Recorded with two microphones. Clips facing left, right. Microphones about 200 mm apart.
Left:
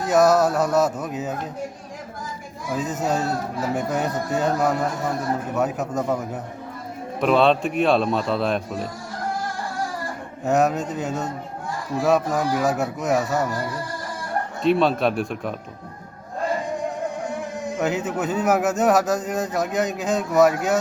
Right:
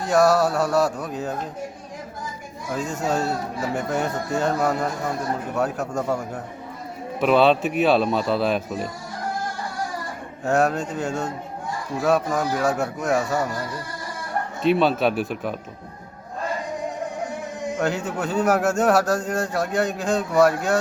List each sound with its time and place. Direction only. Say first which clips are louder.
0.0 s mantra: left 1 dB; centre (ahead or behind)
0.3 s a man's voice: left 1 dB; 20° left (ahead or behind)
1.0 s speech: even; 5° left (ahead or behind)
2.7 s speech: left 1 dB; centre (ahead or behind)
5.9 s a man's voice: left 1 dB; 20° left (ahead or behind)
7.2 s speech: right 1 dB; centre (ahead or behind)
10.4 s speech: left 1 dB; centre (ahead or behind)
14.6 s speech: even; centre (ahead or behind)
17.7 s speech: left 2 dB; 5° left (ahead or behind)